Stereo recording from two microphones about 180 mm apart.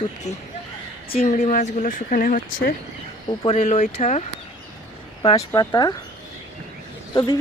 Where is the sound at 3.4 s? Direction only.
35° left (ahead or behind).